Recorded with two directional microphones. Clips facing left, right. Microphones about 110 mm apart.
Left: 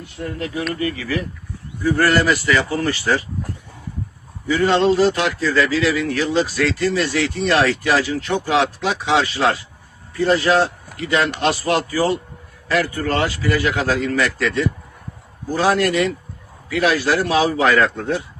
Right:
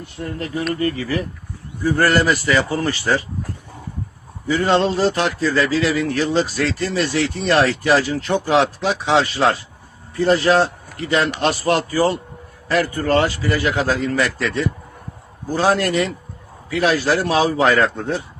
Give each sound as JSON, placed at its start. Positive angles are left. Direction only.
{"t": 0.8, "sound": "speech", "side_deg": -35}
{"t": 4.4, "sound": "speech", "side_deg": -30}